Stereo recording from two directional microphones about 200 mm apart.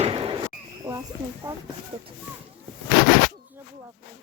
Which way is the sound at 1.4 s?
10° right (ahead or behind).